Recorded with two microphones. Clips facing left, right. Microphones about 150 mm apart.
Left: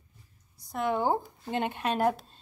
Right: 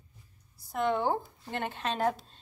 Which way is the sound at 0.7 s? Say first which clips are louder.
Left 1 dB; 10° left (ahead or behind).